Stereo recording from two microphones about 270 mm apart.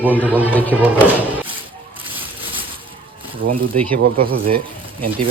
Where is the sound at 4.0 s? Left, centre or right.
Right.